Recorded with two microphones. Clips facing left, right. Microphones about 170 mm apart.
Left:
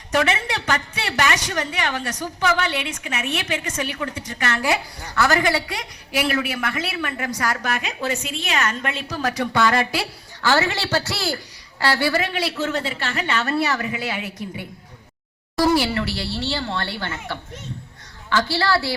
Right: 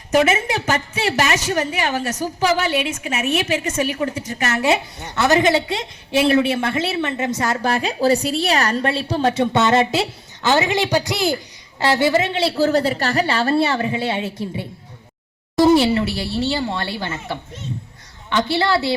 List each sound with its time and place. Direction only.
0.1 s a woman's voice: 20° right (ahead or behind)